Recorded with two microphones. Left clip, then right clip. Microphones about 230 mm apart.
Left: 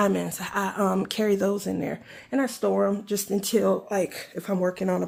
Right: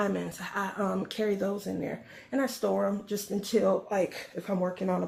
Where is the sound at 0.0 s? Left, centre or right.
Left.